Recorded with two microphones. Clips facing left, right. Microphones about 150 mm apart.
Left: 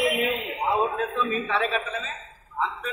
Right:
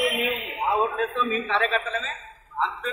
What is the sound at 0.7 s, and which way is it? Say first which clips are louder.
A man's voice: right 1 dB; 10° left (ahead or behind).